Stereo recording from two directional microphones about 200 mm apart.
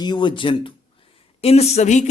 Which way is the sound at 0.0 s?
20° left (ahead or behind).